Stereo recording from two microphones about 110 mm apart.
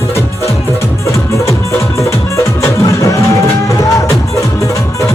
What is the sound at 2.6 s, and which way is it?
Music, 30° left (ahead or behind).